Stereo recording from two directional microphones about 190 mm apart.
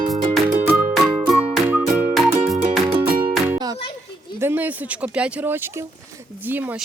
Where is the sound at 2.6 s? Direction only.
30° right (ahead or behind).